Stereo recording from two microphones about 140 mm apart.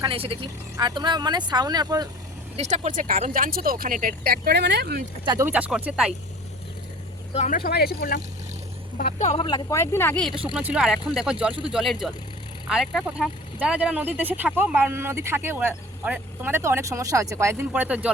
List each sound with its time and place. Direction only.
0.0 s speech: 40° right (ahead or behind)
2.6 s speech: 55° right (ahead or behind); by 4.5 s 90° right
5.2 s speech: 30° right (ahead or behind)
5.5 s speech: 10° right (ahead or behind)
7.3 s speech: 65° left (ahead or behind); by 8.2 s 90° left
9.0 s speech: 65° left (ahead or behind)
9.4 s speech: 30° left (ahead or behind)
9.7 s speech: 20° left (ahead or behind)
10.5 s speech: 10° right (ahead or behind)